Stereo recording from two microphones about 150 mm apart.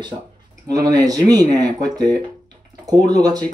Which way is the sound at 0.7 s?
25° right (ahead or behind).